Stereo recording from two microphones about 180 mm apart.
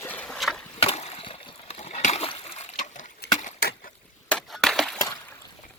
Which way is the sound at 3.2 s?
60° left (ahead or behind).